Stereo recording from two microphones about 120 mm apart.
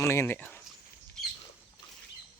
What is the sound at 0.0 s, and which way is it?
Speech, 20° left (ahead or behind).